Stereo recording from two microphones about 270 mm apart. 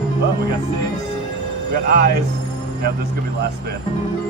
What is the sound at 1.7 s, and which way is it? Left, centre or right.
Speech, right.